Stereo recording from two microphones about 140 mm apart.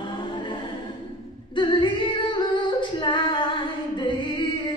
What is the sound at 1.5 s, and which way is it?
Music, 35° left (ahead or behind).